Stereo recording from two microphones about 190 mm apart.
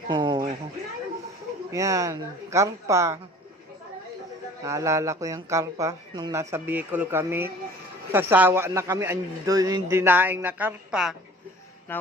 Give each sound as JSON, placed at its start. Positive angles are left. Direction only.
{"t": 0.1, "sound": "a sound", "side_deg": -25}
{"t": 1.7, "sound": "a man's voice", "side_deg": -15}
{"t": 4.6, "sound": "a man's voice", "side_deg": -15}
{"t": 11.9, "sound": "speech", "side_deg": 10}